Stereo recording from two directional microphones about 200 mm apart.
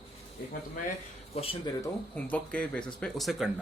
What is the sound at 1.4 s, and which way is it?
Speech, 20° left (ahead or behind).